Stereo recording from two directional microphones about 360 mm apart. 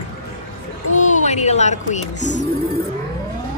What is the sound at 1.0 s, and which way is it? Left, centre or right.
Speech, centre.